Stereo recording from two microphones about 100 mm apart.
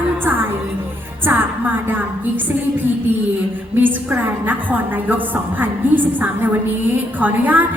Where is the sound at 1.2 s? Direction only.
20° right (ahead or behind).